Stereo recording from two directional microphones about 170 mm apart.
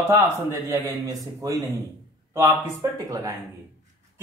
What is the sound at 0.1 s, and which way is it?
Speech, 15° right (ahead or behind).